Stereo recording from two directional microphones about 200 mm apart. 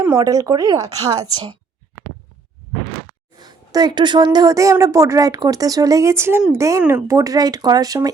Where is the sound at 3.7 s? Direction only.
20° right (ahead or behind).